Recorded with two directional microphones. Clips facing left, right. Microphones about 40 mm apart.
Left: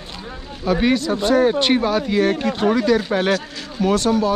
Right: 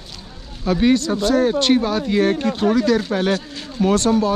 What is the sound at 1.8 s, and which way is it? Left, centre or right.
Speech, centre.